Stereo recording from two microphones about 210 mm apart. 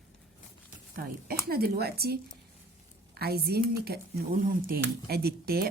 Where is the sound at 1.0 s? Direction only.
45° right (ahead or behind).